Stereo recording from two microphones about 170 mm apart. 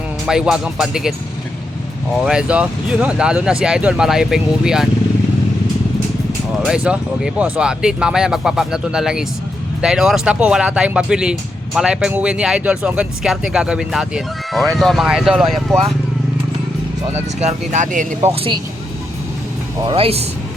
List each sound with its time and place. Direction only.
0.3 s speech: 5° right (ahead or behind)
2.2 s speech: 5° right (ahead or behind)
6.7 s speech: 5° right (ahead or behind)
17.1 s speech: 40° right (ahead or behind)
18.2 s speech: 35° right (ahead or behind)
20.0 s speech: 35° right (ahead or behind)